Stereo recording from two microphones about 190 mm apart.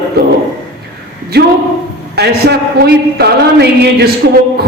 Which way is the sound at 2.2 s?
60° right (ahead or behind).